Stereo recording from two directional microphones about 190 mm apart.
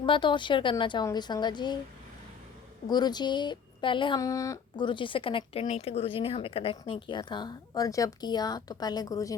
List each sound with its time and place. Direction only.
0.0 s speech: 25° left (ahead or behind)
2.8 s speech: 20° left (ahead or behind)